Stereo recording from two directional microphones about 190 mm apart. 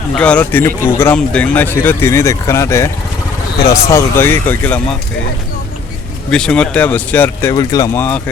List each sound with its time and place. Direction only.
0.2 s speech: 5° left (ahead or behind)
6.3 s speech: 5° left (ahead or behind)